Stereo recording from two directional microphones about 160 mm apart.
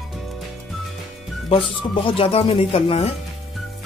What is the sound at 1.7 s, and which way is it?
Speech, 30° left (ahead or behind).